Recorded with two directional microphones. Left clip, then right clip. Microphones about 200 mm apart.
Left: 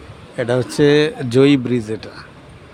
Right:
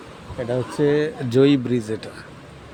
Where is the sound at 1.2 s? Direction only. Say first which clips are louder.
Left 3 dB; 15° left (ahead or behind).